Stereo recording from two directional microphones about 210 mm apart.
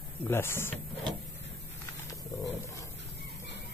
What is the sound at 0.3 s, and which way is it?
Speech, 10° left (ahead or behind).